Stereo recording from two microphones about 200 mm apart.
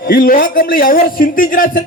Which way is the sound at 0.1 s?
45° left (ahead or behind).